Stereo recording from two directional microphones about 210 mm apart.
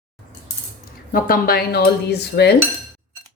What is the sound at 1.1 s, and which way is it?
A woman's voice, 45° left (ahead or behind).